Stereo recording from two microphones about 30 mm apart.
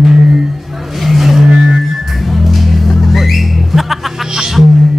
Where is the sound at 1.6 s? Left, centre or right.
Centre.